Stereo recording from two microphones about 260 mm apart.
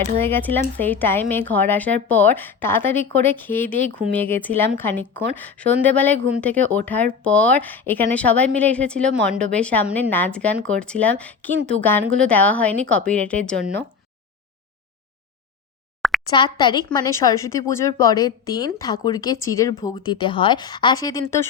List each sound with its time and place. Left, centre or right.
0.2 s a woman's voice: centre
16.0 s plop: centre
16.3 s a woman's voice: centre